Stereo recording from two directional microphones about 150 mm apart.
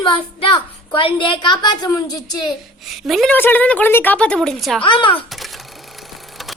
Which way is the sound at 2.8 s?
Centre (ahead or behind).